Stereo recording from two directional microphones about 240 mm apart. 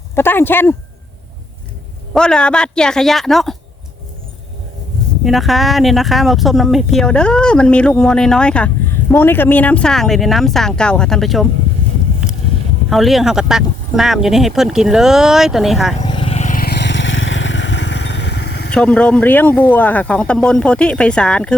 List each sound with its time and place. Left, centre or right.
0.2 s speech: centre
2.1 s speech: centre
5.2 s speech: centre
12.9 s speech: centre
16.0 s vehicle: left
18.7 s speech: centre